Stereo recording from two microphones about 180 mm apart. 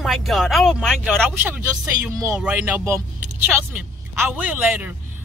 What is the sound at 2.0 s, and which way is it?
Speech, 15° right (ahead or behind).